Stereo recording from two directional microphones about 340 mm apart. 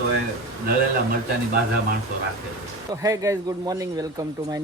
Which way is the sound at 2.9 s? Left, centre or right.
Centre.